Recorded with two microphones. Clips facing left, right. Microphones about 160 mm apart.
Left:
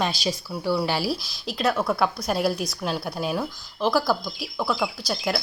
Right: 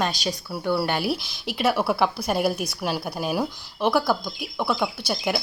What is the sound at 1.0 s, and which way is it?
Speech, 65° right (ahead or behind).